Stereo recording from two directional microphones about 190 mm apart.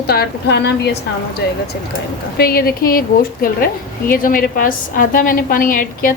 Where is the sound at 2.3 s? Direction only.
50° left (ahead or behind).